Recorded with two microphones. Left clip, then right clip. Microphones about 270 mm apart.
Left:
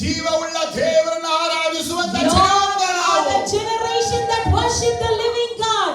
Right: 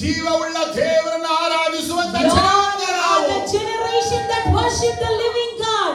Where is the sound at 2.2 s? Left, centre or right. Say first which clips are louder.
Even; left.